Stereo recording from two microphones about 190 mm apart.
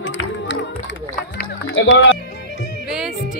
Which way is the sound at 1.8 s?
90° left.